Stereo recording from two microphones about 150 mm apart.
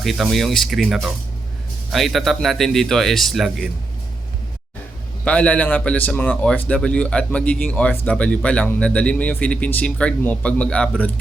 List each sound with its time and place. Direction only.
0.0 s speech: centre (ahead or behind)
5.2 s a man's voice: 10° left (ahead or behind)